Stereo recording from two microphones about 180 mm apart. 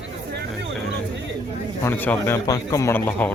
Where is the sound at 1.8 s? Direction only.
10° left (ahead or behind).